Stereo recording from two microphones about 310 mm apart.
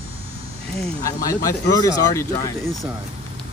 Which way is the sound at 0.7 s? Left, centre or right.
Centre.